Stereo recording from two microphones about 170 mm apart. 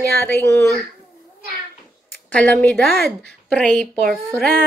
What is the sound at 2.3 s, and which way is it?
A woman's voice, 5° left (ahead or behind).